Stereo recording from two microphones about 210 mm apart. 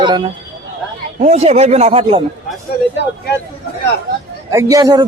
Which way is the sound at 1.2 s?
30° right (ahead or behind).